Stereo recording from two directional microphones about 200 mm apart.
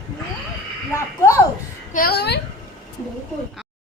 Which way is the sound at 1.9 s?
50° left (ahead or behind).